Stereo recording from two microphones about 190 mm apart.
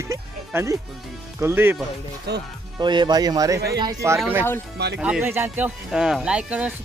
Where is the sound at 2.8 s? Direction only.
25° right (ahead or behind).